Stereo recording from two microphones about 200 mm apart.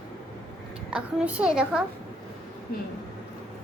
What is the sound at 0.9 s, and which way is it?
Speech, 5° right (ahead or behind).